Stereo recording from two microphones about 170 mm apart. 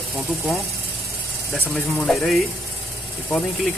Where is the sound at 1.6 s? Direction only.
5° left (ahead or behind).